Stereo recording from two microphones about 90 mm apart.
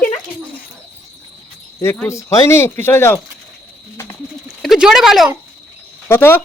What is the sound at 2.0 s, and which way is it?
Speech, 30° left (ahead or behind).